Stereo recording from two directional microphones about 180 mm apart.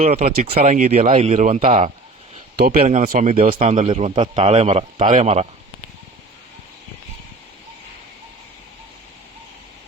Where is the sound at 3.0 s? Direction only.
50° right (ahead or behind).